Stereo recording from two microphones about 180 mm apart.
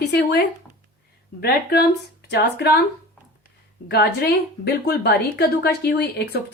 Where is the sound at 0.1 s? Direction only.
65° left (ahead or behind).